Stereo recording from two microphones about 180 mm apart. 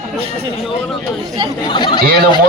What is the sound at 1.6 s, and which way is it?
Speech, 25° left (ahead or behind).